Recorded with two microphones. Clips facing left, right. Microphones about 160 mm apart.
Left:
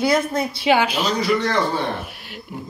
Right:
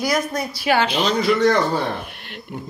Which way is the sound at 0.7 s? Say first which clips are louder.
Right 1 dB; 10° left (ahead or behind).